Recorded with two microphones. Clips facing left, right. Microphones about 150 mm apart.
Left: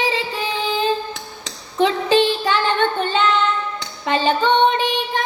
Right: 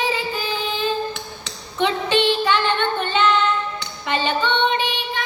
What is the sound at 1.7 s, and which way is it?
Child singing, 35° left (ahead or behind).